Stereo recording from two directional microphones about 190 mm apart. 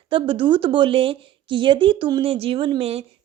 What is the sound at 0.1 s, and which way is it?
A woman's voice, 25° right (ahead or behind).